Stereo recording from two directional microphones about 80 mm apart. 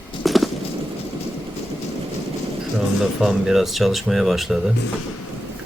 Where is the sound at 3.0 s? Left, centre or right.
Centre.